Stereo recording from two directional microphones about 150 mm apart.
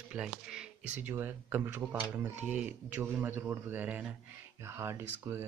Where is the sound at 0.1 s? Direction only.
5° right (ahead or behind).